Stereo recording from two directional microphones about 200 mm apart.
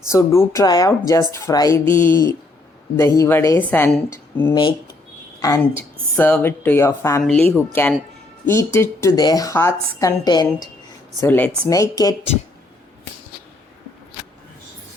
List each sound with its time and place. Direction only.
0.1 s speech: 15° left (ahead or behind)
7.2 s a woman's voice: 5° left (ahead or behind); by 10.7 s 20° left (ahead or behind)
11.2 s speech: 10° left (ahead or behind)
11.7 s speech: 15° left (ahead or behind)